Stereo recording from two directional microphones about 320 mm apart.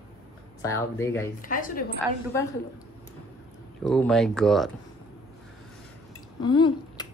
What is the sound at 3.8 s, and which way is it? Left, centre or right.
Speech, centre.